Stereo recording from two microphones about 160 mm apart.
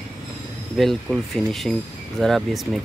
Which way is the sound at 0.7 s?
Centre (ahead or behind).